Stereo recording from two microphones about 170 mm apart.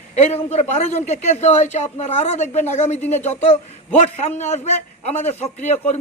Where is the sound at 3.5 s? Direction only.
45° left (ahead or behind).